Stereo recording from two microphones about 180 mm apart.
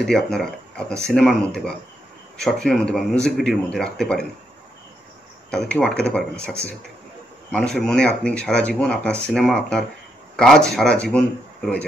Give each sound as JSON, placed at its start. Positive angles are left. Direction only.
{"t": 0.0, "sound": "speech", "side_deg": 0}
{"t": 5.5, "sound": "speech", "side_deg": 5}